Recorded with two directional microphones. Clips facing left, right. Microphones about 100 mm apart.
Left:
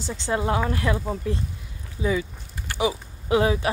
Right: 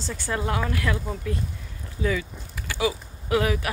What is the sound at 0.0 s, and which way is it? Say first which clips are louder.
Speech: left 3 dB; 20° left (ahead or behind).